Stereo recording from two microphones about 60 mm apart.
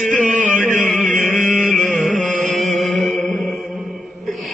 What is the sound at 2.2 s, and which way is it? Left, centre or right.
Music, centre.